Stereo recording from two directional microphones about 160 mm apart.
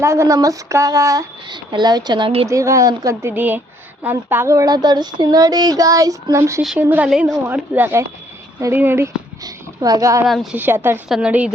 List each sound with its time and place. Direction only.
0.0 s speech: 15° right (ahead or behind); by 2.5 s 35° right (ahead or behind)
2.5 s speech: 20° right (ahead or behind)
6.6 s a woman's voice: centre (ahead or behind); by 10.2 s 20° right (ahead or behind)
10.2 s a woman's voice: centre (ahead or behind)
10.6 s speech: 15° right (ahead or behind)